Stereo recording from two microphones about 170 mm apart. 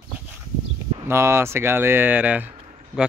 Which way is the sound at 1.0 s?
15° right (ahead or behind).